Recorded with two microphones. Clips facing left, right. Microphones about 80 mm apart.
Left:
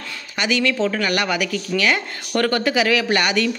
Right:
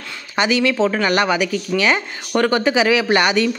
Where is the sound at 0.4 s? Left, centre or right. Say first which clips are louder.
Right 4 dB; right.